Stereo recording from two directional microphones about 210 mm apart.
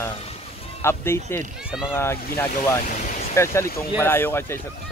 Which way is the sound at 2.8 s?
40° left (ahead or behind).